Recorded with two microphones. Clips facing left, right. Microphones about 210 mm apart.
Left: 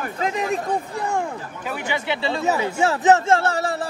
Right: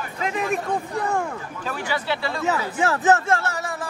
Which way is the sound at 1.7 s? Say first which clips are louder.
Left 1 dB; 20° left (ahead or behind).